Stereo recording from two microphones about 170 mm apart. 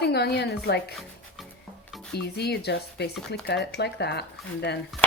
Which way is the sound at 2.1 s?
75° left (ahead or behind).